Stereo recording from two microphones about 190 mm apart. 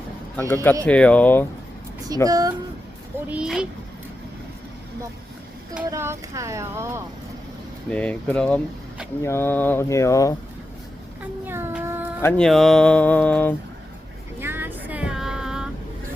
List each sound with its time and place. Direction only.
0.3 s speech: 10° left (ahead or behind)
2.2 s speech: 20° right (ahead or behind)
3.2 s speech: 5° right (ahead or behind)
5.9 s speech: 15° right (ahead or behind)
7.9 s speech: 5° left (ahead or behind)
11.4 s a sound: 10° right (ahead or behind)
12.2 s speech: 5° left (ahead or behind)
14.3 s vehicle: 10° right (ahead or behind)